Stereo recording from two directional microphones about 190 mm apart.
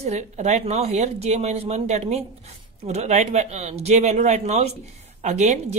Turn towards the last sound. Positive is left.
turn(degrees=-35)  # may be behind; listen again after turning